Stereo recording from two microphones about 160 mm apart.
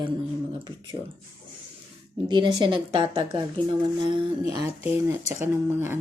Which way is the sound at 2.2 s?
30° right (ahead or behind).